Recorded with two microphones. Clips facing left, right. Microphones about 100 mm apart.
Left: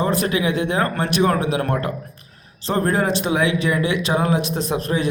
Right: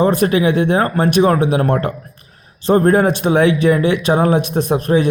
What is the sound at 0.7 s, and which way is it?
A man's voice, 25° right (ahead or behind).